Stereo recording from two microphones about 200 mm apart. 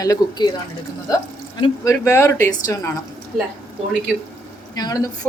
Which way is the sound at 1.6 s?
15° left (ahead or behind).